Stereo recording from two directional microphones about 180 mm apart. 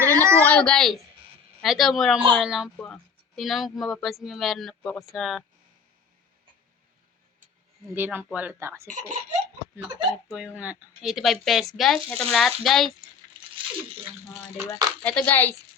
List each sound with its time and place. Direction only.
0.0 s a sound: 15° right (ahead or behind)
0.4 s speech: 5° left (ahead or behind)
7.9 s speech: 10° right (ahead or behind)
8.9 s speech: 45° right (ahead or behind)
9.7 s speech: 5° right (ahead or behind)
15.0 s speech: 10° left (ahead or behind)